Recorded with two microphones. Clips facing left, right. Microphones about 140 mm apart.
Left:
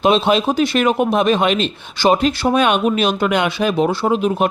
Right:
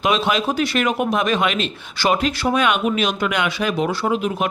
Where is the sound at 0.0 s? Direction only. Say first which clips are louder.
Left 5 dB; 30° left (ahead or behind).